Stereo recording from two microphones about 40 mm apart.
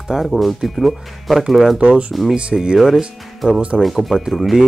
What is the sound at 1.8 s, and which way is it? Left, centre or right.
Speech, right.